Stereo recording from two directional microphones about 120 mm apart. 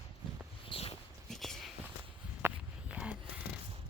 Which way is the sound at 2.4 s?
15° right (ahead or behind).